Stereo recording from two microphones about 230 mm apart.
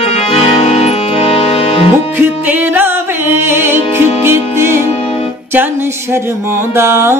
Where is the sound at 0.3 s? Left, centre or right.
Left.